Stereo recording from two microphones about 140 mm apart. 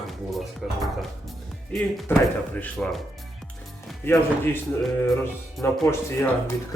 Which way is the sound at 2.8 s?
5° left (ahead or behind).